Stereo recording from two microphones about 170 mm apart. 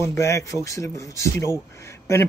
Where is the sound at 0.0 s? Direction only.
15° left (ahead or behind).